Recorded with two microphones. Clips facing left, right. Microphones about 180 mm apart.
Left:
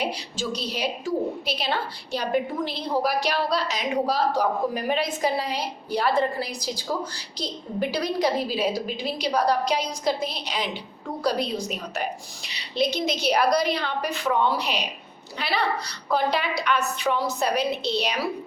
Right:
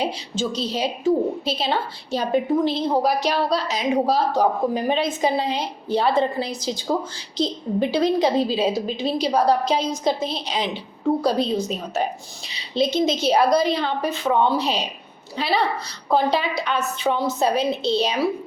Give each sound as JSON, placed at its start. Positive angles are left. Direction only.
{"t": 0.0, "sound": "a woman's voice", "side_deg": -25}